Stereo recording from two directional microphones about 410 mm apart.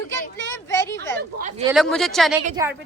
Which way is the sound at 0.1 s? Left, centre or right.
Centre.